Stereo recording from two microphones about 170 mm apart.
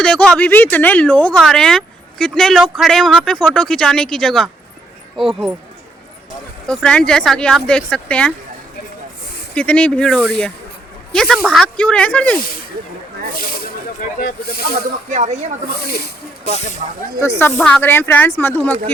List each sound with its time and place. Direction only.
0.0 s speech: 5° left (ahead or behind)
6.7 s speech: 5° left (ahead or behind)
9.6 s speech: 10° left (ahead or behind)
13.3 s speech: 60° left (ahead or behind)
15.1 s speech: 45° right (ahead or behind)
17.2 s speech: 15° left (ahead or behind)